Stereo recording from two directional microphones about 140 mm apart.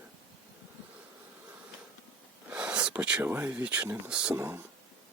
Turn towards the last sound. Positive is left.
turn(degrees=-15)  # may be behind; listen again after turning